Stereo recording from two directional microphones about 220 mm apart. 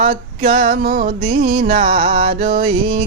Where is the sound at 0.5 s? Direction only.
40° right (ahead or behind).